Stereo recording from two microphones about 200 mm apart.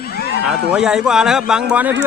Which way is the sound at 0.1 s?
50° left (ahead or behind).